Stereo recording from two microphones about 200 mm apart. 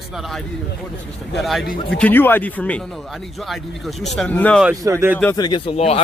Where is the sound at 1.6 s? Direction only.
50° left (ahead or behind).